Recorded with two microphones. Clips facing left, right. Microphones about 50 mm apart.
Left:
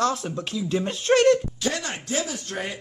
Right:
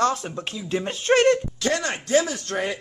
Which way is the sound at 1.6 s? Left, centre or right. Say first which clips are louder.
Right 6 dB; right.